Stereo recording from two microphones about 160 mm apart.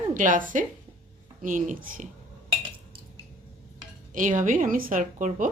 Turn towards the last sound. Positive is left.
turn(degrees=-55)  # may be behind; listen again after turning